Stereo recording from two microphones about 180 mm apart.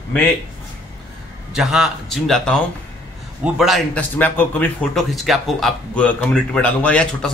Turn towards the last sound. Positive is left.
turn(degrees=5)  # may be behind; listen again after turning